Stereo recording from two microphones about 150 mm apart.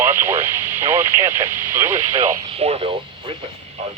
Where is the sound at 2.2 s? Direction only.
45° right (ahead or behind).